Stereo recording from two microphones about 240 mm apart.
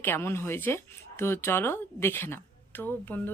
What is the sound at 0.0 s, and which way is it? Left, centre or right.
Speech, centre.